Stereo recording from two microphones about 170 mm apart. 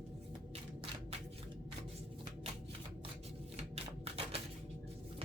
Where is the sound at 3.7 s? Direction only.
35° right (ahead or behind).